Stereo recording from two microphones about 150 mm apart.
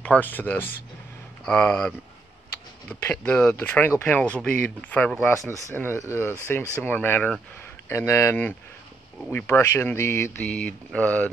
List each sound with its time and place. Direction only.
0.0 s speech: 10° left (ahead or behind)
5.5 s speech: 15° left (ahead or behind)